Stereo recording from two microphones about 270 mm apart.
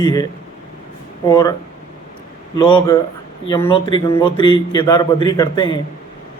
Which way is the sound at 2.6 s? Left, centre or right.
Centre.